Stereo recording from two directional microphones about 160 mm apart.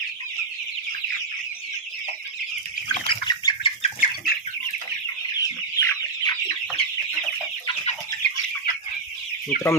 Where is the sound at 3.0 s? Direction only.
30° left (ahead or behind).